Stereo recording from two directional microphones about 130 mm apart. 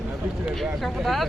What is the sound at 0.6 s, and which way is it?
Speech, centre (ahead or behind).